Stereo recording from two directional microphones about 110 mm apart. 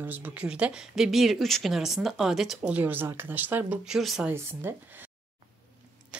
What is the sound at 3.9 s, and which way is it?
Speech, 5° right (ahead or behind).